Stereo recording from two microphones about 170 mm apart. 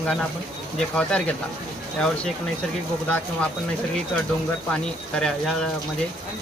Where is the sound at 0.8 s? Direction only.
5° left (ahead or behind).